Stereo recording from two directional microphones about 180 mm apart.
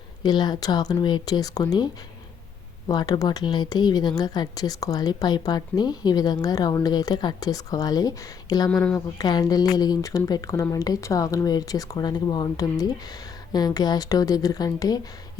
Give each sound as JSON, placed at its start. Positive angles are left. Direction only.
{"t": 0.2, "sound": "a woman's voice", "side_deg": 25}
{"t": 2.9, "sound": "a woman's voice", "side_deg": 20}
{"t": 8.7, "sound": "speech", "side_deg": 5}
{"t": 9.1, "sound": "a woman's voice", "side_deg": 20}